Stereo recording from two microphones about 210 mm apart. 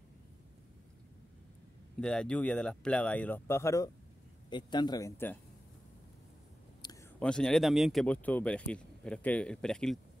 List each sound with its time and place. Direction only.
2.0 s speech: 5° left (ahead or behind)
6.8 s a sound: 20° left (ahead or behind)
7.2 s speech: 5° left (ahead or behind)